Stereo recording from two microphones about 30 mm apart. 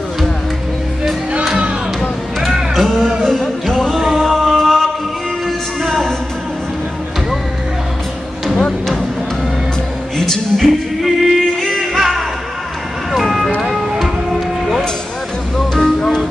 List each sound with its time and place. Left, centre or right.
2.7 s music: centre
4.4 s chant: centre
8.5 s music: left
10.1 s music: centre
11.0 s music: centre
15.5 s music: centre